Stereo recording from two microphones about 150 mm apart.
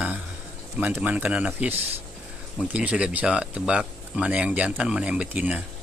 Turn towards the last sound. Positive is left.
turn(degrees=-10)  # may be behind; listen again after turning